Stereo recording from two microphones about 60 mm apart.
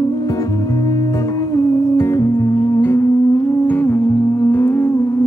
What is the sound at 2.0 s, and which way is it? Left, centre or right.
Music, left.